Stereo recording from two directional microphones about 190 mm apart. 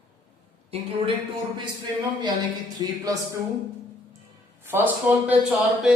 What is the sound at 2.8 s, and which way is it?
Speech, 20° right (ahead or behind).